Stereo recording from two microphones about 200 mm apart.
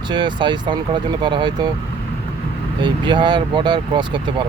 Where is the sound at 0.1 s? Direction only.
25° right (ahead or behind).